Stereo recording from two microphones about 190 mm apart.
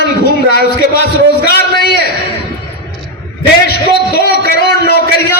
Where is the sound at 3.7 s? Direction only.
55° left (ahead or behind).